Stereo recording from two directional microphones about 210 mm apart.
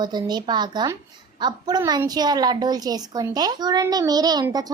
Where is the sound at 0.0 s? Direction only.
20° right (ahead or behind).